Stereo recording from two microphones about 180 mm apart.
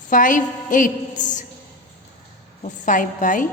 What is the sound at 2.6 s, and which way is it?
Speech, 45° left (ahead or behind).